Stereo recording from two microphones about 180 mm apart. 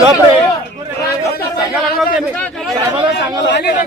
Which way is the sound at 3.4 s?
70° left (ahead or behind).